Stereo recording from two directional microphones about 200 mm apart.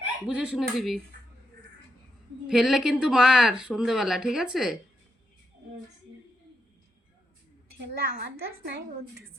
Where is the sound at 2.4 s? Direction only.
5° right (ahead or behind).